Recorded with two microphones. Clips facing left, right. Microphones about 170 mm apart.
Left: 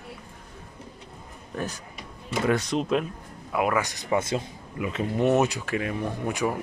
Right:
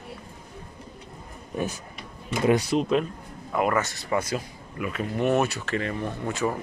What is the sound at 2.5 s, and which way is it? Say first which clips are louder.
Speech: right 3 dB; 10° right (ahead or behind).